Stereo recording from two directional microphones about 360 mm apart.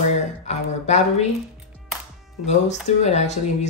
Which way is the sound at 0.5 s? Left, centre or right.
Centre.